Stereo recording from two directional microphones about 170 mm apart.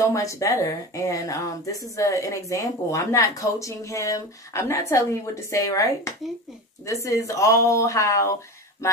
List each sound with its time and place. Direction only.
0.0 s speech: 20° left (ahead or behind)